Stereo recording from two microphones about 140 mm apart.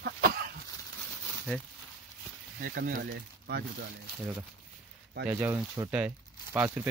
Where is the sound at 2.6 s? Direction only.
90° right.